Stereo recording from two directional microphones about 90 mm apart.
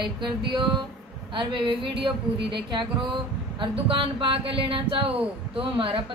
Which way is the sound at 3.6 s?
75° right (ahead or behind).